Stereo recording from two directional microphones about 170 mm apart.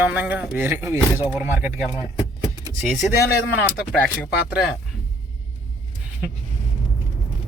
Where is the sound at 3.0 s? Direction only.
Centre (ahead or behind).